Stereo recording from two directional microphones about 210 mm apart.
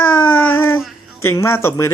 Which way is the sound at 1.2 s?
15° left (ahead or behind).